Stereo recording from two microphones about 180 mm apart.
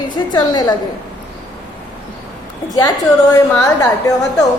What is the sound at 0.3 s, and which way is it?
Speech, 20° left (ahead or behind).